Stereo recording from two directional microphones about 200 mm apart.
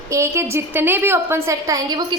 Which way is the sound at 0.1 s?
15° right (ahead or behind).